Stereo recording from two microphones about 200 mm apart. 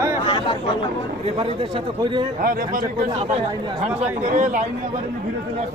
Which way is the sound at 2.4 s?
40° right (ahead or behind).